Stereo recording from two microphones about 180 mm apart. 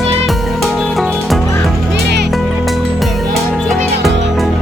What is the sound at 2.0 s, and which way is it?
Music, 65° right (ahead or behind).